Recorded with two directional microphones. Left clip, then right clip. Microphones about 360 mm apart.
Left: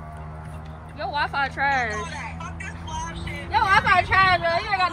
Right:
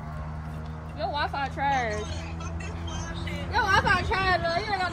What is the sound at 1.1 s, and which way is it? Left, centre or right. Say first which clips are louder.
Speech: left 5 dB; centre.